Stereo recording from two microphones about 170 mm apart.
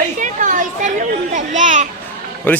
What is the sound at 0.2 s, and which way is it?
Children playing, 50° right (ahead or behind).